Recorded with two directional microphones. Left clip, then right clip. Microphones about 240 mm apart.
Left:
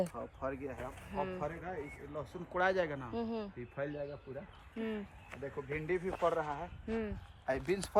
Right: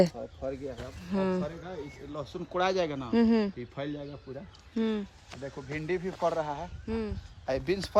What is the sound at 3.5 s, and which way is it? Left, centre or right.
Speech, right.